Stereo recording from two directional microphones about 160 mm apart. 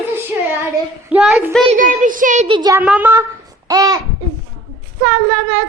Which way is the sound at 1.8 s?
55° right (ahead or behind).